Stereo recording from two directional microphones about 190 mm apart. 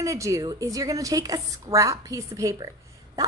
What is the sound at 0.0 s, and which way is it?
A woman's voice, 15° right (ahead or behind).